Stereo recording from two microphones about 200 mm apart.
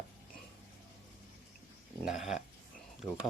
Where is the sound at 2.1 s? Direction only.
Centre (ahead or behind).